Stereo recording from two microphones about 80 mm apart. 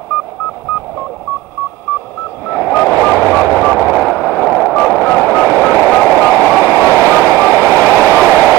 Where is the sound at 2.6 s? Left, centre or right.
Centre.